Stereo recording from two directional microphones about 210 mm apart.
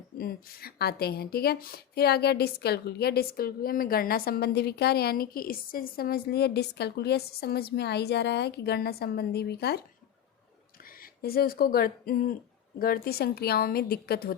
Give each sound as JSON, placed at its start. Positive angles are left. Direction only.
{"t": 0.2, "sound": "a woman's voice", "side_deg": 45}
{"t": 10.8, "sound": "a woman's voice", "side_deg": 45}